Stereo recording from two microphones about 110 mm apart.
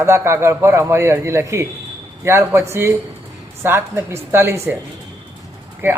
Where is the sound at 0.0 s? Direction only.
25° right (ahead or behind).